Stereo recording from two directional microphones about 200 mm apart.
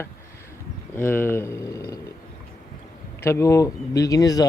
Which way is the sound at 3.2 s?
15° left (ahead or behind).